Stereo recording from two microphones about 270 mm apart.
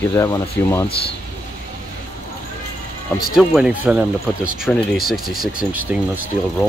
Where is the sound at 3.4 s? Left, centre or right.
Centre.